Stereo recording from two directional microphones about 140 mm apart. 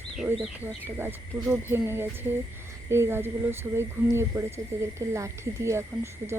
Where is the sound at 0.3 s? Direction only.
15° right (ahead or behind).